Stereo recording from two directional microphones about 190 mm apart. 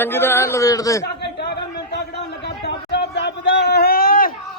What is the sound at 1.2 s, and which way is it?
Chatter, 60° left (ahead or behind).